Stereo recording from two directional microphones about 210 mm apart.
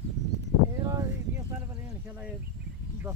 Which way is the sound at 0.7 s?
15° right (ahead or behind).